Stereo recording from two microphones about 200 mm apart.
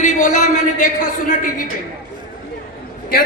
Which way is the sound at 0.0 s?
40° left (ahead or behind).